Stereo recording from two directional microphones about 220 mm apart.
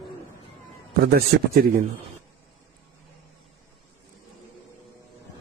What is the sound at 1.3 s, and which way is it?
Speech, 45° right (ahead or behind).